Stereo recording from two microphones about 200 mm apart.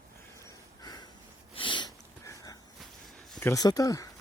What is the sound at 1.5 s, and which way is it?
Sniff, 25° left (ahead or behind).